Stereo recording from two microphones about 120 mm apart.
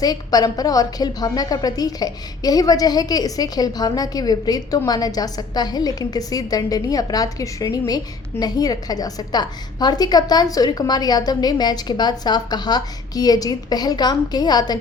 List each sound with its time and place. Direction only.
0.0 s a woman's voice: 35° left (ahead or behind)